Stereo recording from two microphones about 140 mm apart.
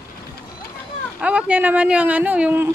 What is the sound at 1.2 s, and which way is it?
Speech, 10° right (ahead or behind).